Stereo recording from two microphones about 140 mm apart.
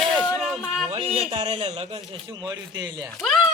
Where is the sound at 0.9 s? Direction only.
45° right (ahead or behind).